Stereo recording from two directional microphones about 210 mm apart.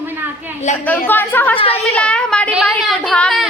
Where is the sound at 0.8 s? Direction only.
10° left (ahead or behind).